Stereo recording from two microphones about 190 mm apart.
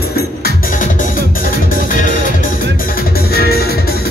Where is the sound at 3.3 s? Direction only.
55° left (ahead or behind).